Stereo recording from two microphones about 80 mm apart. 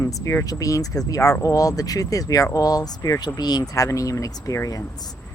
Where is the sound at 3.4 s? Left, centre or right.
Left.